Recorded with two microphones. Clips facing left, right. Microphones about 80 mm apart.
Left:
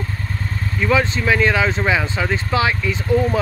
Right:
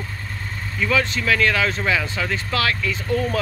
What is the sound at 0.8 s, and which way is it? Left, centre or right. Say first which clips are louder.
Speech: left 3 dB; left.